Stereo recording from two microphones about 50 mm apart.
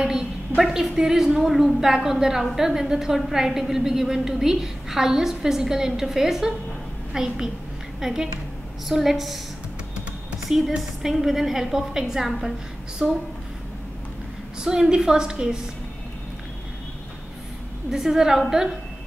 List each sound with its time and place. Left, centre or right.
0.0 s a sound: centre
0.6 s a woman's voice: centre
10.8 s a woman's voice: centre
14.6 s a woman's voice: centre
17.9 s a woman's voice: centre